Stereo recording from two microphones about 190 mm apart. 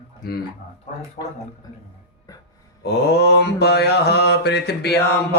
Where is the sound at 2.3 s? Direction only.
20° left (ahead or behind).